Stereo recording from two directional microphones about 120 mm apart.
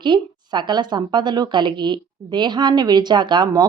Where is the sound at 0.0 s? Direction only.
40° right (ahead or behind).